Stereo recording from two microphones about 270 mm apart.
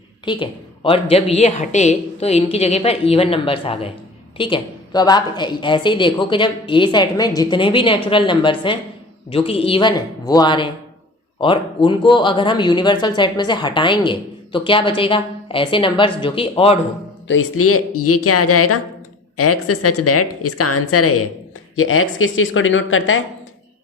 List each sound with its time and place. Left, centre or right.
0.3 s a woman's voice: centre
17.2 s a woman's voice: left